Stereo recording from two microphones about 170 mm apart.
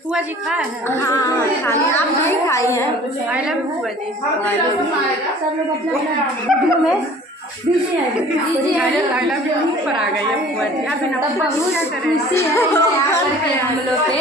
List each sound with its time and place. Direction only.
0.8 s a woman's voice: 20° left (ahead or behind)
6.4 s a woman's voice: centre (ahead or behind)
12.4 s a woman's voice: 15° left (ahead or behind)